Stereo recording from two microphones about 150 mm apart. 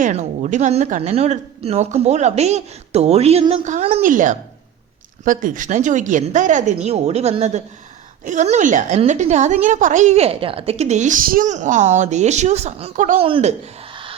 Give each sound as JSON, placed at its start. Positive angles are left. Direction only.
{"t": 0.0, "sound": "a woman's voice", "side_deg": -55}
{"t": 4.0, "sound": "a woman's voice", "side_deg": -60}
{"t": 13.1, "sound": "speech", "side_deg": -35}
{"t": 13.9, "sound": "music", "side_deg": -35}